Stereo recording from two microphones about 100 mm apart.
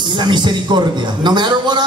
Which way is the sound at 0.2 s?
50° right (ahead or behind).